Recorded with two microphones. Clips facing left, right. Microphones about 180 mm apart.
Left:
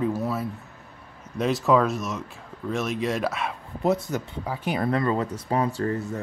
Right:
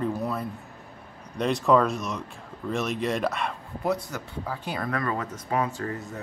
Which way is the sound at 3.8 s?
20° left (ahead or behind).